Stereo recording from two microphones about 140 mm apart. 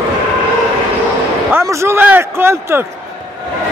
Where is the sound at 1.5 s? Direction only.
15° right (ahead or behind).